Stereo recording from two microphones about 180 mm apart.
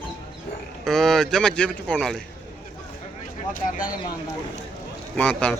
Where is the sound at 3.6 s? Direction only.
50° left (ahead or behind).